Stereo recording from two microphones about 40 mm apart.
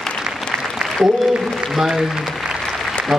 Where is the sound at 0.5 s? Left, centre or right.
Right.